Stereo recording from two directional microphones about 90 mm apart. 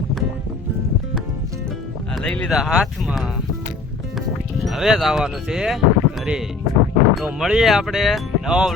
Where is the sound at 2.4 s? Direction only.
5° right (ahead or behind).